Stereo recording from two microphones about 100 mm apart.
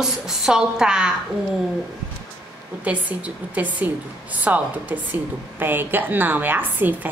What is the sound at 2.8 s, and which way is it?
A woman's voice, 15° right (ahead or behind).